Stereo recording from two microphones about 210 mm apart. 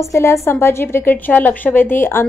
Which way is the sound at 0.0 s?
15° left (ahead or behind).